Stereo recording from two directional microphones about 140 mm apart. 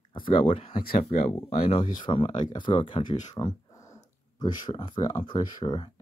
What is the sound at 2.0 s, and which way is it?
Speech, 35° left (ahead or behind).